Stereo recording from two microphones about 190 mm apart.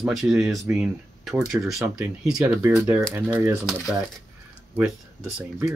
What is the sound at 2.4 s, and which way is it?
Speech, 15° right (ahead or behind).